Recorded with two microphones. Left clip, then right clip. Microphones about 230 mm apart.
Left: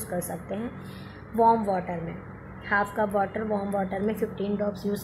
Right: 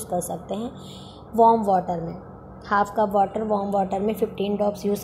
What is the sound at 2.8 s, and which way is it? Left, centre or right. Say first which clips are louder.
Speech: right 5 dB; centre.